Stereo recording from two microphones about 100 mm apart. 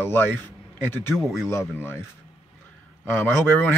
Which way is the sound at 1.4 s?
25° left (ahead or behind).